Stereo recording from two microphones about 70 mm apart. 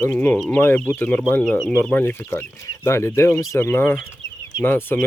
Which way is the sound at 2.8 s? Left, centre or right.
Left.